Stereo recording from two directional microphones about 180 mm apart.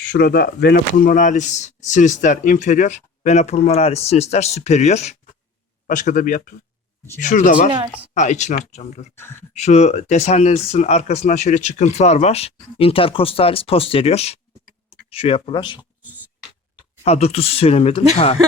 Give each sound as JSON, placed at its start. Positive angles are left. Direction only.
{"t": 0.0, "sound": "speech", "side_deg": 65}
{"t": 15.8, "sound": "beatboxing", "side_deg": -5}
{"t": 17.0, "sound": "speech", "side_deg": 35}